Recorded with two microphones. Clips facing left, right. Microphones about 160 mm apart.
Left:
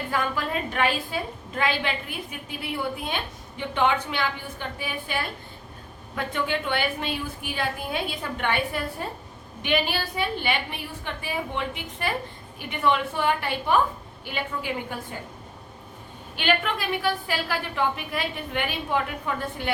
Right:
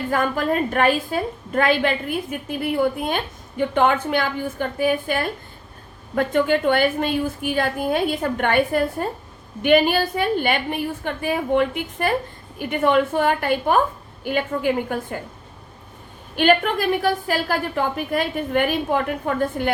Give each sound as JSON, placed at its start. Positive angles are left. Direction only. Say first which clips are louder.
{"t": 0.1, "sound": "a woman's voice", "louder": "right 7 dB", "side_deg": -45}
{"t": 16.3, "sound": "a woman's voice", "louder": "right 8 dB", "side_deg": -45}